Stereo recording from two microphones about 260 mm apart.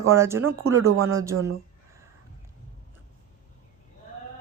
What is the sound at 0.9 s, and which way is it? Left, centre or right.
Speech, right.